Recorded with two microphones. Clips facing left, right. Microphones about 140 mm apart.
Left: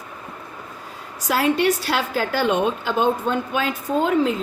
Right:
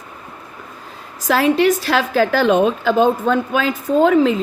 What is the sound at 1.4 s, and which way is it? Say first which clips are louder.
A woman's voice: right 4 dB; 90° right.